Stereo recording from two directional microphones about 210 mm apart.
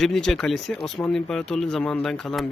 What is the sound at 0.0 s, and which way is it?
Speech, centre (ahead or behind).